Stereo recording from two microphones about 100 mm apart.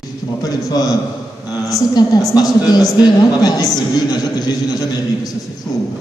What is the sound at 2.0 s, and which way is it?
A woman's voice, 45° left (ahead or behind).